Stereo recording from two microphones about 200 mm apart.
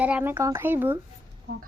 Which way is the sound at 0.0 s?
5° right (ahead or behind).